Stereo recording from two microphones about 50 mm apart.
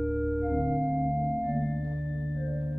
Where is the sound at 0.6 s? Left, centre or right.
Centre.